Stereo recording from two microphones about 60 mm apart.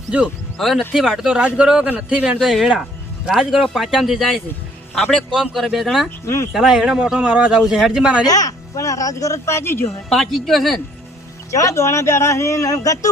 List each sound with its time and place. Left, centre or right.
0.6 s speech: centre; by 2.4 s right
2.4 s speech: centre
6.2 s a woman's voice: left
6.5 s speech: centre
7.6 s speech: centre
8.3 s speech: left
9.6 s a woman's voice: left
10.1 s speech: centre
11.5 s speech: left